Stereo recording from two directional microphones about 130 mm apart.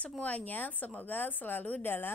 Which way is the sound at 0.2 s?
10° left (ahead or behind).